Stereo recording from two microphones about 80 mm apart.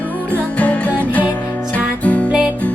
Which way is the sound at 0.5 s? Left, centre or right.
Centre.